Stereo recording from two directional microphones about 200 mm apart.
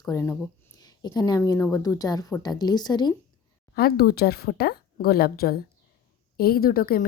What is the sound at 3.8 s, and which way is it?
A woman's voice, 50° left (ahead or behind).